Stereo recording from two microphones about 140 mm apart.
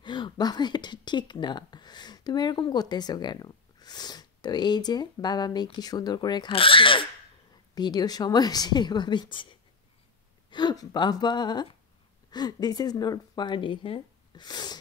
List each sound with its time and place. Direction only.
0.0 s speech: 35° left (ahead or behind)